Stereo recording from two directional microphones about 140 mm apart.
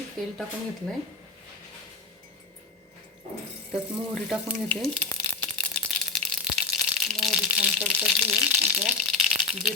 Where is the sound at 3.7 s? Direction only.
Centre (ahead or behind).